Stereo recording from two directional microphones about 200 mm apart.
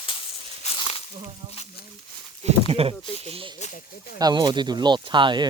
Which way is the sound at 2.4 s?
30° right (ahead or behind).